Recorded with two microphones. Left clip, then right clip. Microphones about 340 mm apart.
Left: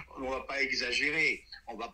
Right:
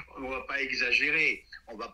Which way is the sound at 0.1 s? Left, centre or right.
Centre.